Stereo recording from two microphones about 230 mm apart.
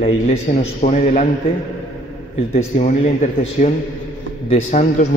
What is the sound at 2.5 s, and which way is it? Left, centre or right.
A man's voice, left.